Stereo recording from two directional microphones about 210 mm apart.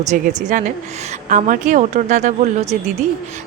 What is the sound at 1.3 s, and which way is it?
A woman's voice, 40° right (ahead or behind).